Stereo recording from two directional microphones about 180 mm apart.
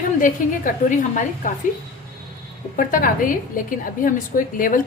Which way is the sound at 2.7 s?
50° left (ahead or behind).